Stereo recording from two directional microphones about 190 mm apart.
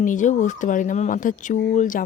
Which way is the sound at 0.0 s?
40° left (ahead or behind).